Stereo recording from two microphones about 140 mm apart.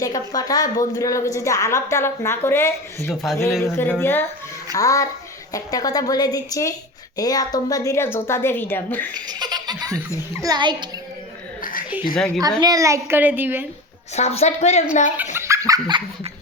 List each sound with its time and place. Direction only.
0.0 s a woman's voice: 25° left (ahead or behind)
9.1 s a child's voice: 30° right (ahead or behind)
11.6 s a sound: 80° left
12.1 s a woman's voice: 5° left (ahead or behind)
12.4 s a child's voice: 30° right (ahead or behind)
14.2 s a woman's voice: 50° left (ahead or behind)
15.4 s laughter: 20° right (ahead or behind)